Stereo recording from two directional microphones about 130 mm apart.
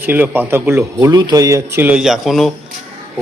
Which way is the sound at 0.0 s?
15° right (ahead or behind).